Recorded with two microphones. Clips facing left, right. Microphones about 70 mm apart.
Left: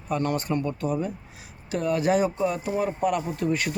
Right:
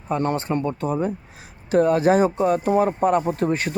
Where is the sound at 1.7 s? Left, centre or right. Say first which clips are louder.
Right 6 dB; right.